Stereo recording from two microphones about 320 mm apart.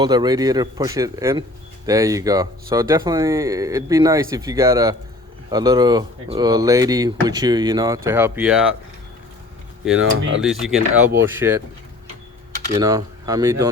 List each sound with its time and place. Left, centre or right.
0.0 s speech: centre
10.0 s cutlery: right
10.4 s speech: centre
12.7 s speech: centre